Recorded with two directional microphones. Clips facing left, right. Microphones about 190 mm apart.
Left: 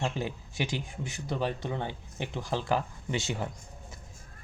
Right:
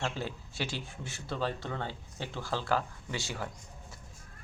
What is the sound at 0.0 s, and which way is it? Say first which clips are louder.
Speech: left 3 dB; 15° left (ahead or behind).